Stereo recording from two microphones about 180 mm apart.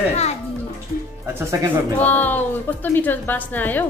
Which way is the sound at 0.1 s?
35° left (ahead or behind).